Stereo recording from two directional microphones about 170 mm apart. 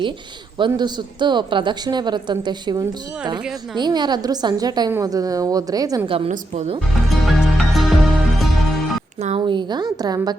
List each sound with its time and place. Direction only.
0.6 s a woman's voice: 25° right (ahead or behind)
6.1 s a woman's voice: 35° right (ahead or behind)
7.3 s music: centre (ahead or behind)
9.5 s a woman's voice: 25° right (ahead or behind)